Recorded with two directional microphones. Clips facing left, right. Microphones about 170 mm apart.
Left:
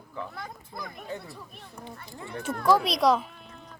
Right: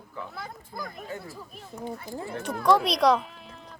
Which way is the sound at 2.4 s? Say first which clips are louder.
Right 1 dB; centre (ahead or behind).